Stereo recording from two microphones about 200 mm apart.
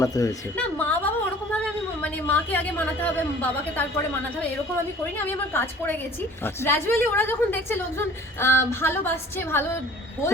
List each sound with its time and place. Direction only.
0.0 s a woman's voice: 15° left (ahead or behind)
5.1 s a woman's voice: 10° left (ahead or behind)